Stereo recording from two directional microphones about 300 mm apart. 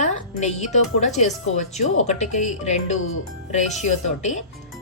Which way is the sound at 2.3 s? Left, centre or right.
Left.